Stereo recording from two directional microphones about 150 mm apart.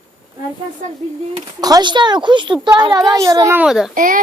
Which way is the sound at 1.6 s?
30° right (ahead or behind).